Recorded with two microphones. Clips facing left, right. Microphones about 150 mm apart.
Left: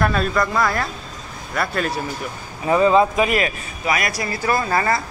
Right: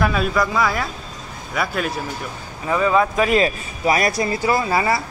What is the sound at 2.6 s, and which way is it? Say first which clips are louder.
Speech: left 3 dB; 25° left (ahead or behind).